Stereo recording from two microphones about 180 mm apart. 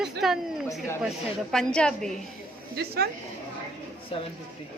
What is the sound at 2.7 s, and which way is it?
Speech, 60° right (ahead or behind).